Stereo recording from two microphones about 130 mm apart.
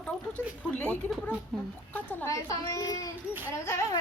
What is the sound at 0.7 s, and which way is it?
Speech, 10° left (ahead or behind).